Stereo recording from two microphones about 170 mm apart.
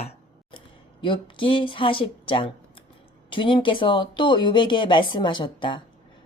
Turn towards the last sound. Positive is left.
turn(degrees=30)  # may be behind; listen again after turning